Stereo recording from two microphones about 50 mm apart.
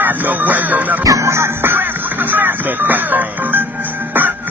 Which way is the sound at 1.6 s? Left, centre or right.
Right.